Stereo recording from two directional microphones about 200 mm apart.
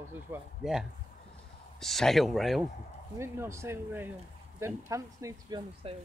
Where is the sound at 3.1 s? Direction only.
15° right (ahead or behind).